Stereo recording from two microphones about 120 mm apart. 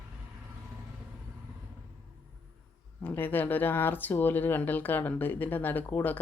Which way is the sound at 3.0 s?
15° left (ahead or behind).